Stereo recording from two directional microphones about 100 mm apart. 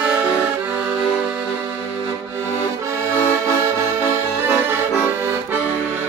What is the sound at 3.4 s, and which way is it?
Accordion, 30° right (ahead or behind).